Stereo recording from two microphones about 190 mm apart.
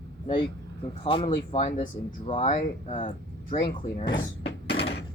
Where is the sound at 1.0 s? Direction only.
30° left (ahead or behind).